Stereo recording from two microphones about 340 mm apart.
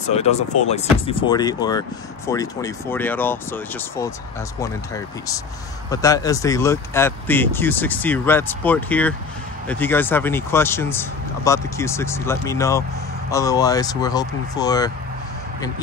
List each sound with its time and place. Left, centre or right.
0.1 s speech: centre